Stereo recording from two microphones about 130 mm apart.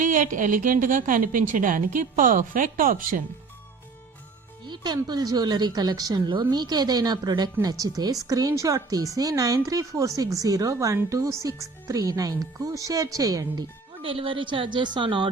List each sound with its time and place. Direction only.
0.0 s a woman's voice: 85° right
4.6 s music: 35° right (ahead or behind)
5.0 s speech: 30° right (ahead or behind)
14.0 s a woman's voice: 45° right (ahead or behind)